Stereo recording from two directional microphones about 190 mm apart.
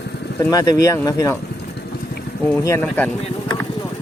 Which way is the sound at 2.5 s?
15° left (ahead or behind).